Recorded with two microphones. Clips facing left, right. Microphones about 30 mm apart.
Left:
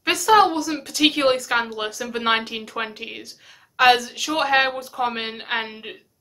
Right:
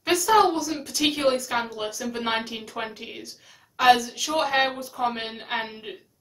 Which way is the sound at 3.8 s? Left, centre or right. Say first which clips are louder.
Left 2 dB; left.